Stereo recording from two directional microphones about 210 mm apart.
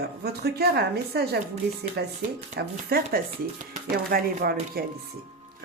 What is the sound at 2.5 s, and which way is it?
Speech, 45° right (ahead or behind).